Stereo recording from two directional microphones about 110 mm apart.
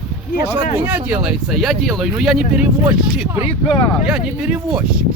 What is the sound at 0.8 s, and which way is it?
Speech, 15° right (ahead or behind).